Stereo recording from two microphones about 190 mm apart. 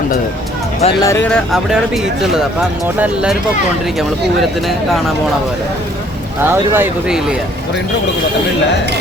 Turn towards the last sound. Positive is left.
turn(degrees=-5)  # may be behind; listen again after turning